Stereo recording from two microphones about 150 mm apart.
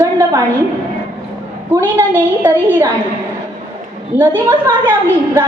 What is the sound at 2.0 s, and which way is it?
Speech, 15° right (ahead or behind).